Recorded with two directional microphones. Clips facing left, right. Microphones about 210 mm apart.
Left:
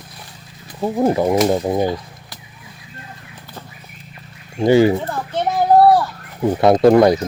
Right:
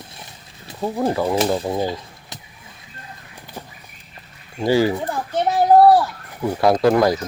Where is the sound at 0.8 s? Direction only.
15° left (ahead or behind).